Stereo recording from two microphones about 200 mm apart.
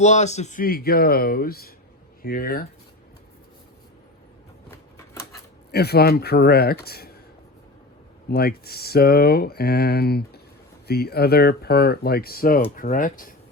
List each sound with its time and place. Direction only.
0.0 s speech: 35° left (ahead or behind)
5.7 s speech: 55° left (ahead or behind)
8.3 s speech: 50° left (ahead or behind)